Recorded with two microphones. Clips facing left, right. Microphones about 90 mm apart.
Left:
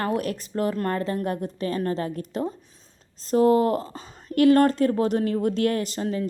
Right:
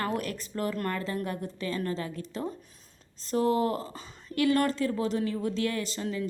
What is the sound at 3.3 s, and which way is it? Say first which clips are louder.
A woman's voice: left 7 dB; 40° left (ahead or behind).